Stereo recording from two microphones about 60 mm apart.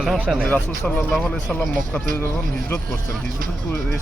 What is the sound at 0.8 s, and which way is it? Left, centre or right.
Speech, centre.